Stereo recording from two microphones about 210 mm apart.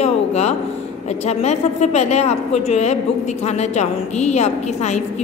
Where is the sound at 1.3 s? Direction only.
30° left (ahead or behind).